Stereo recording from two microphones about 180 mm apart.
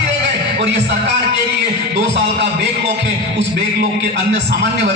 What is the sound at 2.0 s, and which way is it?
A man's voice, 70° right (ahead or behind).